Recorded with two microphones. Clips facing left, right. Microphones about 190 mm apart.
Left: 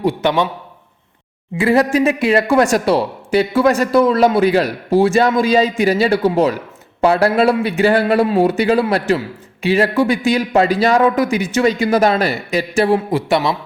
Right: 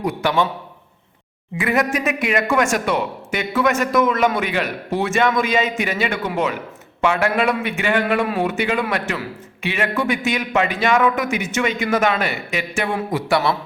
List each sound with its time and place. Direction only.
0.0 s a man's voice: 25° left (ahead or behind)
1.5 s speech: 30° left (ahead or behind)